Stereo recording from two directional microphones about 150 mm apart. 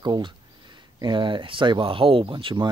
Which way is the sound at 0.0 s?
30° right (ahead or behind).